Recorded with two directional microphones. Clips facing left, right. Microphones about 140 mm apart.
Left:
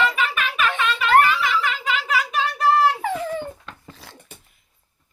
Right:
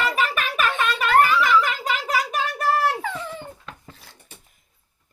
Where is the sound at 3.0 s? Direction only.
40° left (ahead or behind).